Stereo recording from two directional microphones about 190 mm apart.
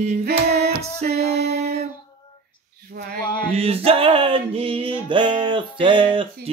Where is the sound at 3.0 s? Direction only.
60° right (ahead or behind).